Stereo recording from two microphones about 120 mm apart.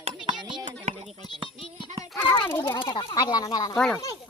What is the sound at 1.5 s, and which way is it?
Music, 50° left (ahead or behind).